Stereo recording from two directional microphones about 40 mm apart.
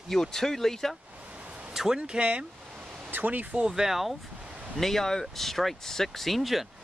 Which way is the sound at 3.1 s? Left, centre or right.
Right.